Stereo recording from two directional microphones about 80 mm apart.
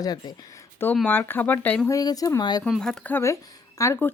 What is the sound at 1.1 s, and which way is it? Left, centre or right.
Speech, left.